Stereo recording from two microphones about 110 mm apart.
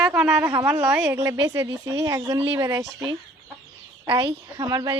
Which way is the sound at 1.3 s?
45° right (ahead or behind).